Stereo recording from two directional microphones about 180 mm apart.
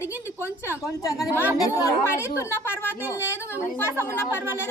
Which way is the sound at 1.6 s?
15° left (ahead or behind).